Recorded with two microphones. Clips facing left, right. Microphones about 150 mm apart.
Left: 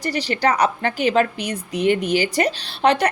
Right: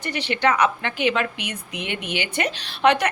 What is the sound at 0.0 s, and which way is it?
A woman's voice, 35° left (ahead or behind).